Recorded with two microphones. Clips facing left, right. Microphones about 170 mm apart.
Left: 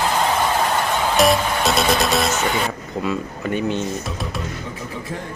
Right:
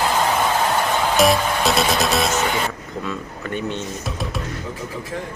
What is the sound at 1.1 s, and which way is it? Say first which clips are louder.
Music: left 1 dB; centre (ahead or behind).